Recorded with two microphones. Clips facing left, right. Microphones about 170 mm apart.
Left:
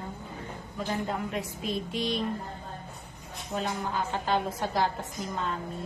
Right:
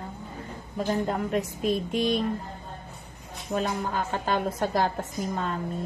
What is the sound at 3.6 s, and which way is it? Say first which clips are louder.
A woman's voice: right 3 dB; 50° right (ahead or behind).